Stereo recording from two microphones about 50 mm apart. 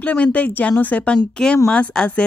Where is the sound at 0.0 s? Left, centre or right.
Left.